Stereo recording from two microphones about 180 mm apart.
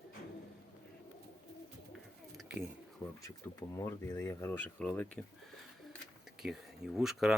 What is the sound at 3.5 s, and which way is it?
Speech, 20° left (ahead or behind).